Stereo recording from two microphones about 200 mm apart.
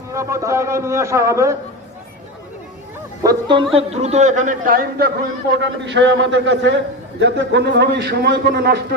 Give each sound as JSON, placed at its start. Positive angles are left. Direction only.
{"t": 0.1, "sound": "a man's voice", "side_deg": -15}
{"t": 3.2, "sound": "a man's voice", "side_deg": -25}
{"t": 5.5, "sound": "a man's voice", "side_deg": -60}